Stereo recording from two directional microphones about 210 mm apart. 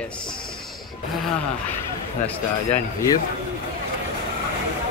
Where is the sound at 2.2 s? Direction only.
10° left (ahead or behind).